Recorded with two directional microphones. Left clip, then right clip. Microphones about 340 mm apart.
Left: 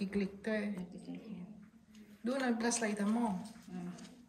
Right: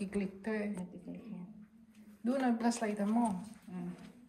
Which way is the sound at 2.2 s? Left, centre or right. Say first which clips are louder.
Right 2 dB; centre.